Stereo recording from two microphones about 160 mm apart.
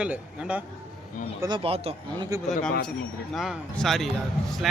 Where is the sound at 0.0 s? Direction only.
5° right (ahead or behind).